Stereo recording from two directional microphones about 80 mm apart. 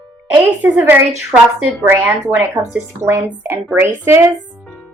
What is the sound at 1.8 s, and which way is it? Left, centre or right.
A woman's voice, right.